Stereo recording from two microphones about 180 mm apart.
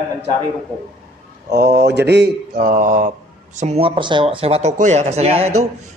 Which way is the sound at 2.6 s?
45° right (ahead or behind).